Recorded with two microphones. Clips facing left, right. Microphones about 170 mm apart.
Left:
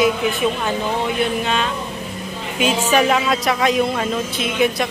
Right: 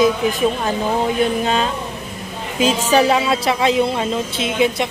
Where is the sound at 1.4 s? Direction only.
35° right (ahead or behind).